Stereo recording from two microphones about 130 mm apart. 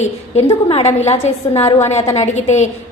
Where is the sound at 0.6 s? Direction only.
50° left (ahead or behind).